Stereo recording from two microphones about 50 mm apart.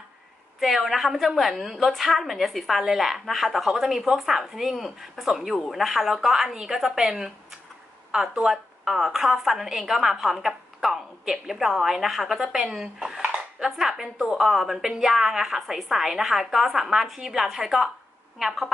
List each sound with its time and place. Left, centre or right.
0.6 s a woman's voice: centre